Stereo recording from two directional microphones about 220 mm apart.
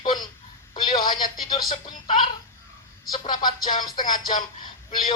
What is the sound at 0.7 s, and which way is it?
Speech, 20° left (ahead or behind).